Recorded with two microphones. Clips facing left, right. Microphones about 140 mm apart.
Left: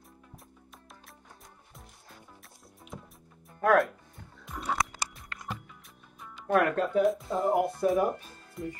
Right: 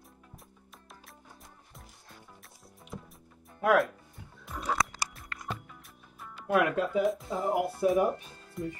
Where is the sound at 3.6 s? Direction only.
5° right (ahead or behind).